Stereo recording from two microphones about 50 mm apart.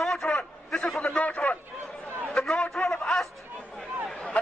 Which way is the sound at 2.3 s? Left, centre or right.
Centre.